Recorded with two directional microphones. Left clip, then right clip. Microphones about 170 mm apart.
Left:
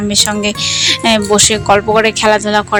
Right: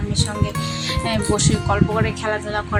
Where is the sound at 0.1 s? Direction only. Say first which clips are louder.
Left 11 dB; 55° left (ahead or behind).